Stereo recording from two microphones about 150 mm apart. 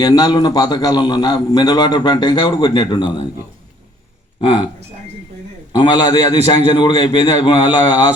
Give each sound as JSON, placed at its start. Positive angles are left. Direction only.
{"t": 0.0, "sound": "a man's voice", "side_deg": 25}
{"t": 4.4, "sound": "speech", "side_deg": 35}
{"t": 5.7, "sound": "a man's voice", "side_deg": 30}